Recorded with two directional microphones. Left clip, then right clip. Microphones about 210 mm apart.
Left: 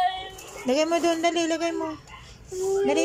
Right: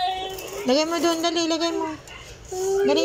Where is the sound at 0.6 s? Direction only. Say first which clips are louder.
Right 1 dB; 15° left (ahead or behind).